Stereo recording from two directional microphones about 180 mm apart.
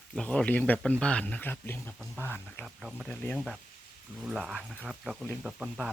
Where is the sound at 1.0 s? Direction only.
5° left (ahead or behind).